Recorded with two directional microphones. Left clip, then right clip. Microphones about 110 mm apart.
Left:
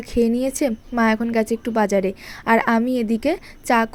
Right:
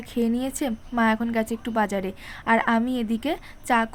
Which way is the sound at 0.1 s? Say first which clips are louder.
Left 7 dB; 35° left (ahead or behind).